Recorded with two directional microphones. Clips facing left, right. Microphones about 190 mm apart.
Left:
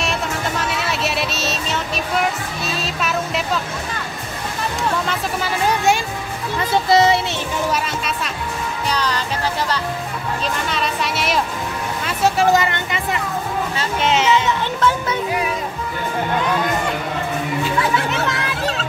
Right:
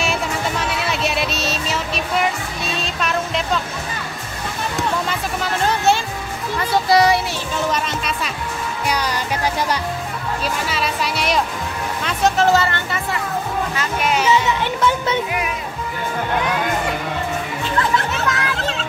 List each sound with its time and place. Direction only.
0.0 s music: centre (ahead or behind)
5.0 s speech: centre (ahead or behind)
6.9 s a child's voice: 25° left (ahead or behind)
7.7 s speech: 5° left (ahead or behind)
8.8 s speech: 10° right (ahead or behind)
10.7 s a child's voice: centre (ahead or behind); by 14.3 s 25° left (ahead or behind)
14.3 s speech: 15° right (ahead or behind)
17.6 s speech: 10° left (ahead or behind)